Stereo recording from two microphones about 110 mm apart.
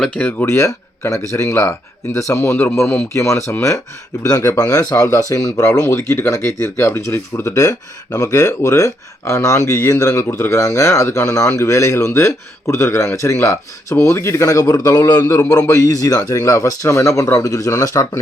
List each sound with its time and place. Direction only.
0.2 s a man's voice: 15° left (ahead or behind); by 18.2 s 30° left (ahead or behind)